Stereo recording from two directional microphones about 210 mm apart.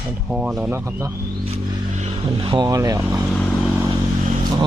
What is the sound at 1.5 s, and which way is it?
Speech, 30° right (ahead or behind).